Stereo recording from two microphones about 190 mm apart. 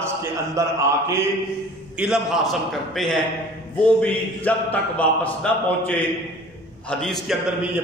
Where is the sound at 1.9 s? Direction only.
5° right (ahead or behind).